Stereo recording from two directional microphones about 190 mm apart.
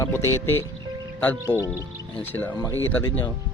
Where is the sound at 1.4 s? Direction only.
15° right (ahead or behind).